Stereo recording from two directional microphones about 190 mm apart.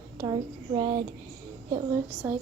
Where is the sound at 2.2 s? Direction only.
10° right (ahead or behind).